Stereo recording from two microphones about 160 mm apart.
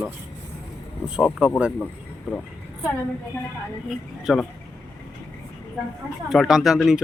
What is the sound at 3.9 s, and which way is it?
Speech, centre (ahead or behind).